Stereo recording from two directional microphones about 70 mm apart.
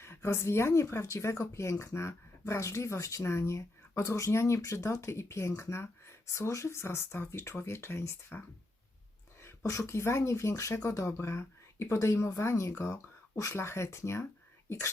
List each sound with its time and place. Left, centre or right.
0.0 s speech: left
9.4 s speech: left